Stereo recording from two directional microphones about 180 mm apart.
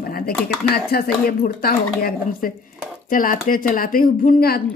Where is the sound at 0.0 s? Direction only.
55° left (ahead or behind).